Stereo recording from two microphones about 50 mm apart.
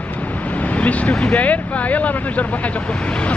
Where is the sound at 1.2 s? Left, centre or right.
Left.